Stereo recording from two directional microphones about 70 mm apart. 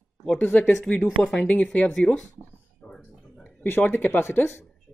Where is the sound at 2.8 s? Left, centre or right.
Centre.